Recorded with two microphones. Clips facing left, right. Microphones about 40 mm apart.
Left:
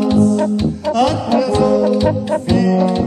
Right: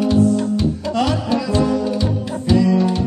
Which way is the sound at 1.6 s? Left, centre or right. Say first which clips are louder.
Left 5 dB; left.